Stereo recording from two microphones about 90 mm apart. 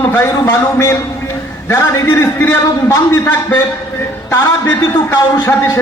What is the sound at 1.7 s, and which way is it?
A man's voice, 30° left (ahead or behind).